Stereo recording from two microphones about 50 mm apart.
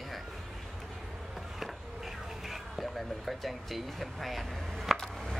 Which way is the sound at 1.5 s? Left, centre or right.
Centre.